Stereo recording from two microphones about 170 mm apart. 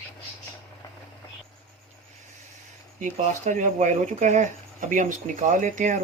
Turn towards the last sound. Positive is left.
turn(degrees=-50)  # may be behind; listen again after turning